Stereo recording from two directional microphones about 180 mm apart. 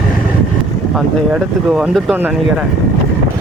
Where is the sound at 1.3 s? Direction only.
5° right (ahead or behind).